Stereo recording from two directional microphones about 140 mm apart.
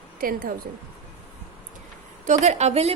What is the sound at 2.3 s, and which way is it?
Speech, 55° right (ahead or behind).